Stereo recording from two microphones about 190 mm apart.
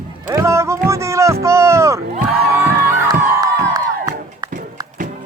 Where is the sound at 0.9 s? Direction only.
15° right (ahead or behind).